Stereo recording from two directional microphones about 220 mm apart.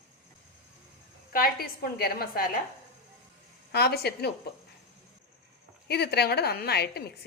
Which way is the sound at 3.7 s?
45° left (ahead or behind).